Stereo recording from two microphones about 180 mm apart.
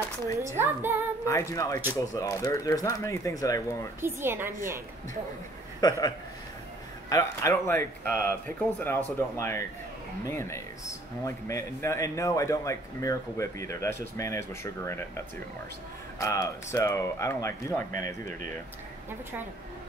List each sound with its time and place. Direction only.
0.4 s speech: 15° right (ahead or behind)
1.2 s speech: 15° left (ahead or behind)
4.0 s speech: 15° right (ahead or behind)
5.8 s a man's voice: 20° left (ahead or behind)
16.2 s speech: 20° left (ahead or behind)